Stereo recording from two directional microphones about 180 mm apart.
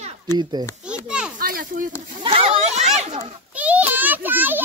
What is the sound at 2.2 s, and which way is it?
Speech, 30° right (ahead or behind).